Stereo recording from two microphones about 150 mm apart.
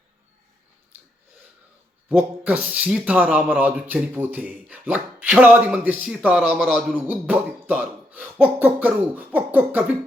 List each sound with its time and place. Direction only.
2.0 s speech: 10° right (ahead or behind)